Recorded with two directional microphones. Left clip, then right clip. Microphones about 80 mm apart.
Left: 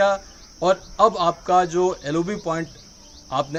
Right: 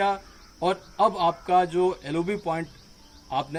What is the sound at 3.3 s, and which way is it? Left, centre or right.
Speech, left.